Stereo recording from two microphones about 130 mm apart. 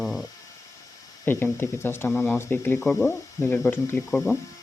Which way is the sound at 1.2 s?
15° left (ahead or behind).